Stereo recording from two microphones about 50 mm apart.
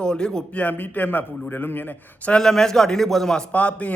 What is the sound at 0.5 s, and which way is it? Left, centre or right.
A man's voice, left.